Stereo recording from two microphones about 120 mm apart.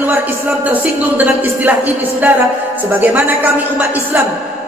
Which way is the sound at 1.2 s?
15° right (ahead or behind).